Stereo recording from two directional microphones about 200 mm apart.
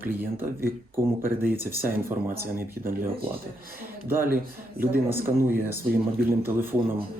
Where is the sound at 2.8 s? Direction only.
45° right (ahead or behind).